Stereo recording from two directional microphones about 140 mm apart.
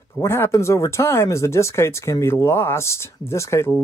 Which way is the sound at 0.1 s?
15° left (ahead or behind).